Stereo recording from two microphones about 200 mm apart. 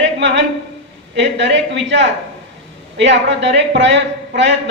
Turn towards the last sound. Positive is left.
turn(degrees=-60)  # may be behind; listen again after turning